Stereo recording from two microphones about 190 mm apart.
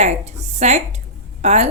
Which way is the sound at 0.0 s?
35° right (ahead or behind).